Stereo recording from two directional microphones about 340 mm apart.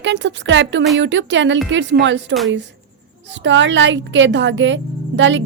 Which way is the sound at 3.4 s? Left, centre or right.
Right.